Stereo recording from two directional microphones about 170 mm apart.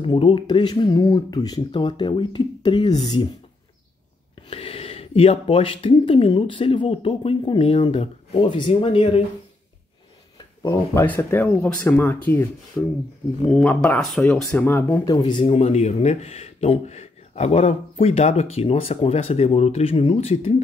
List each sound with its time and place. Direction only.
0.0 s speech: 30° left (ahead or behind)
4.5 s speech: 35° left (ahead or behind)
10.6 s speech: 15° left (ahead or behind)
13.5 s speech: 5° left (ahead or behind); by 15.4 s 25° left (ahead or behind)
15.4 s speech: 40° left (ahead or behind)